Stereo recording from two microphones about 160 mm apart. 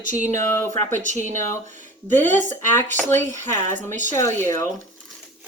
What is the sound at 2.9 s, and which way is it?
Speech, 10° left (ahead or behind).